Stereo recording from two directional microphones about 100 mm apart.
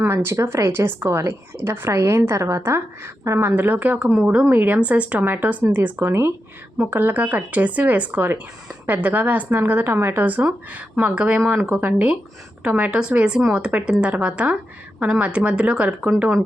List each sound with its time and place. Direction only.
0.0 s a woman's voice: 25° right (ahead or behind)